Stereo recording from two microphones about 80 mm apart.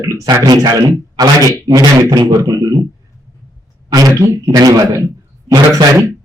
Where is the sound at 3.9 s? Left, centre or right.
Right.